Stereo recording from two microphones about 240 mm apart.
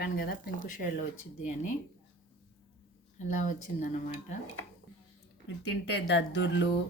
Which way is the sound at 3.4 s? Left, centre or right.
Left.